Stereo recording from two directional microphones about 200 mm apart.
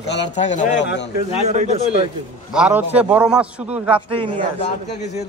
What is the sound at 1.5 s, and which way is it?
Speech, 35° right (ahead or behind).